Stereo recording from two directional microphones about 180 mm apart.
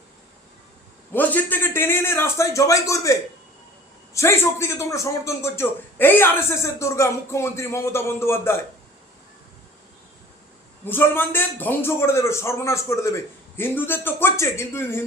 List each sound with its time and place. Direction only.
1.1 s a man's voice: 10° left (ahead or behind)
10.8 s a man's voice: 10° left (ahead or behind)